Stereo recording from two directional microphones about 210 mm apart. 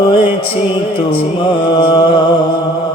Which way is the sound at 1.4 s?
25° left (ahead or behind).